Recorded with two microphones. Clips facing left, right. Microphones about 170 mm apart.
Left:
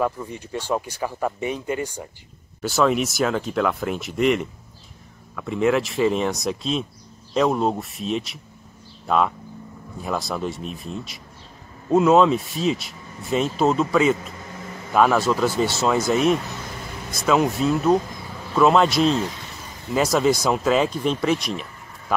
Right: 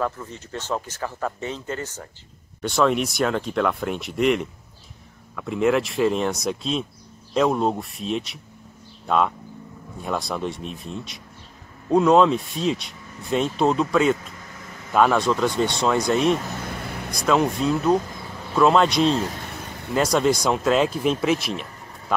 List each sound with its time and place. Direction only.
0.0 s speech: 15° left (ahead or behind)
2.6 s speech: centre (ahead or behind)
19.4 s vehicle: 60° right (ahead or behind)
20.0 s speech: centre (ahead or behind)